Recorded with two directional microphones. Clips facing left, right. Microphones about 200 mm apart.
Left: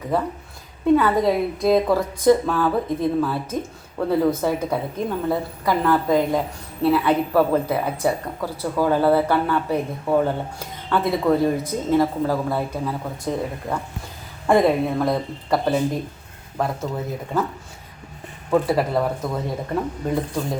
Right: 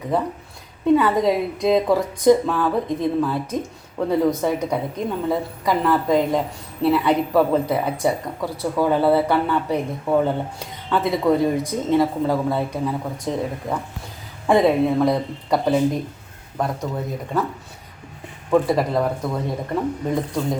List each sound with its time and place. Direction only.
0.9 s speech: centre (ahead or behind)
18.5 s speech: 5° left (ahead or behind)